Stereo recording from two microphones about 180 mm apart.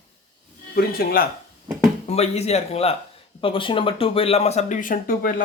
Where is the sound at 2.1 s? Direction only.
35° left (ahead or behind).